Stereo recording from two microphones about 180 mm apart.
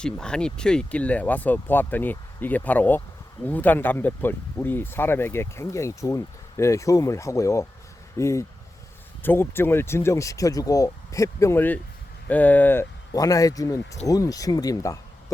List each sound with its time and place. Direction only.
0.0 s speech: 5° left (ahead or behind)